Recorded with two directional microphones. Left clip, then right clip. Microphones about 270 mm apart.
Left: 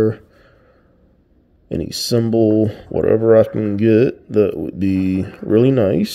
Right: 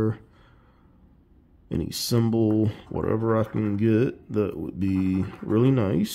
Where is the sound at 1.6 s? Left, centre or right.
Centre.